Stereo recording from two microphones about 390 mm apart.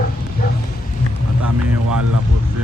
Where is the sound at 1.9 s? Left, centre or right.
Right.